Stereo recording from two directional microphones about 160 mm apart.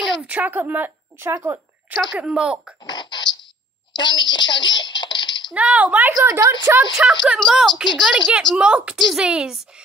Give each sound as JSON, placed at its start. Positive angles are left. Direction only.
{"t": 0.0, "sound": "a sound", "side_deg": -10}
{"t": 2.1, "sound": "a woman's voice", "side_deg": -5}
{"t": 2.9, "sound": "a sound", "side_deg": 25}
{"t": 3.9, "sound": "a child's voice", "side_deg": 30}
{"t": 5.5, "sound": "a woman's voice", "side_deg": -10}
{"t": 6.9, "sound": "a woman's voice", "side_deg": 0}